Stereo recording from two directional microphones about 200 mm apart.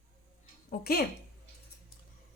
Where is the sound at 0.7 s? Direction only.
50° left (ahead or behind).